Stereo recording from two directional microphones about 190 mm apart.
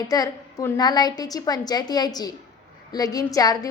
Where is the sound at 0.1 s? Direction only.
20° left (ahead or behind).